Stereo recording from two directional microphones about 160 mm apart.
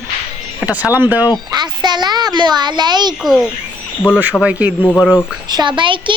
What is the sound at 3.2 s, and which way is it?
Speech, centre (ahead or behind).